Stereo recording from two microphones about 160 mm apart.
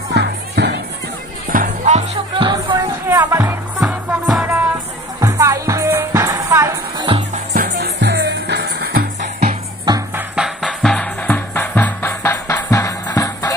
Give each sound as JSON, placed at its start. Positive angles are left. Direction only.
{"t": 0.1, "sound": "music", "side_deg": -90}
{"t": 1.5, "sound": "music", "side_deg": -50}
{"t": 2.3, "sound": "music", "side_deg": -30}
{"t": 3.8, "sound": "music", "side_deg": 0}
{"t": 5.2, "sound": "music", "side_deg": -20}
{"t": 7.5, "sound": "music", "side_deg": -85}
{"t": 10.1, "sound": "music", "side_deg": -5}